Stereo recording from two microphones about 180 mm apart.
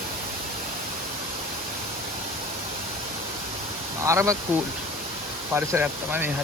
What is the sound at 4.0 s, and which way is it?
Speech, 15° right (ahead or behind).